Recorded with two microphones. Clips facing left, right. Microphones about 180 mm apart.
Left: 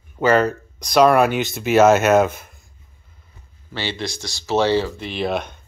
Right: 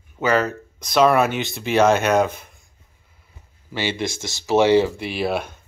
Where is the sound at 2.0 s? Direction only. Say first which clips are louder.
Left 3 dB; 50° left (ahead or behind).